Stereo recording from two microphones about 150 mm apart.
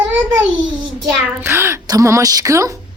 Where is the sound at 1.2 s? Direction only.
15° right (ahead or behind).